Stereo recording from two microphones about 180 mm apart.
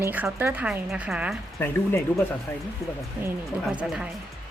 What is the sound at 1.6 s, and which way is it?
Speech, 10° left (ahead or behind).